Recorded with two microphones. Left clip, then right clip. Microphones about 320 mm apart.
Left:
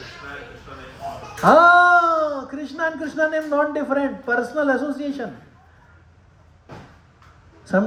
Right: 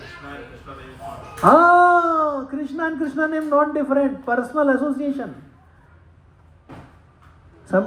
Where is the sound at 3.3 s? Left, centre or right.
Centre.